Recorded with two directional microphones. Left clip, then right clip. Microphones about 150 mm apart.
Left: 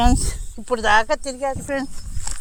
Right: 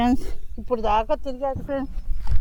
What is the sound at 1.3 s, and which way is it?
Speech, 55° left (ahead or behind).